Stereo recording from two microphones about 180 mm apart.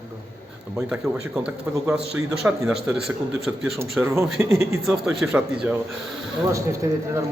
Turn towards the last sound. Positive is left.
turn(degrees=-15)  # may be behind; listen again after turning